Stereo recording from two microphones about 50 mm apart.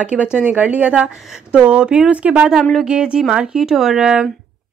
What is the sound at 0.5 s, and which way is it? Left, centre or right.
A woman's voice, right.